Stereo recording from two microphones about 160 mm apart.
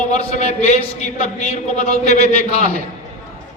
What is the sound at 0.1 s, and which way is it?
A man's voice, 45° left (ahead or behind).